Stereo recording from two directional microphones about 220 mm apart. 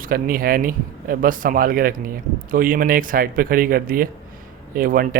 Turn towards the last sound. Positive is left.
turn(degrees=-40)  # may be behind; listen again after turning